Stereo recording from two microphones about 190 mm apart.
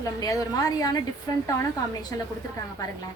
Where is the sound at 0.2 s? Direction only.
20° left (ahead or behind).